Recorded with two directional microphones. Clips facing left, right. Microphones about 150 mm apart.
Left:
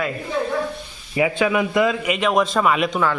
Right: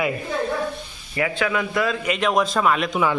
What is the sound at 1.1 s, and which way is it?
Speech, 20° left (ahead or behind).